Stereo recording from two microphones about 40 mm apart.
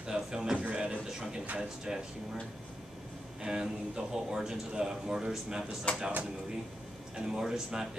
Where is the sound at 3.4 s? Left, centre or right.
Centre.